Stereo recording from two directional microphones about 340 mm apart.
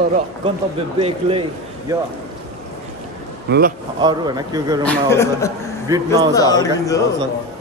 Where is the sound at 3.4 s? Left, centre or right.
Right.